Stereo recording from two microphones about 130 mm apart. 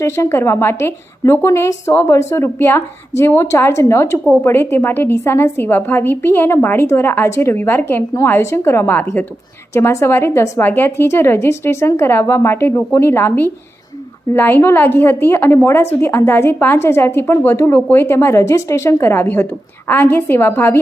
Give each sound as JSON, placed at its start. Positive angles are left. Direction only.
{"t": 0.0, "sound": "a woman's voice", "side_deg": 20}